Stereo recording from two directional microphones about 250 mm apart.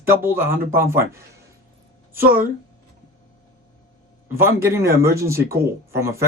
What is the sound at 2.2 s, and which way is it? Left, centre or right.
Speech, right.